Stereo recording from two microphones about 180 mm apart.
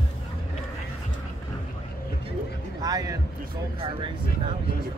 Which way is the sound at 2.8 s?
20° right (ahead or behind).